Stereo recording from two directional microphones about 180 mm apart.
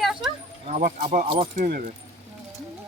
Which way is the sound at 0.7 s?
45° right (ahead or behind).